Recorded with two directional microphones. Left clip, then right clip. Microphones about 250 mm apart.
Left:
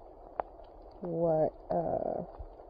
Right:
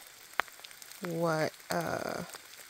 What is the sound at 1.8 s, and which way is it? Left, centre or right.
Speech, right.